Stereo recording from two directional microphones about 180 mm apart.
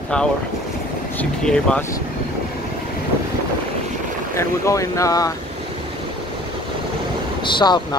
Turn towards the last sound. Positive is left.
turn(degrees=25)  # may be behind; listen again after turning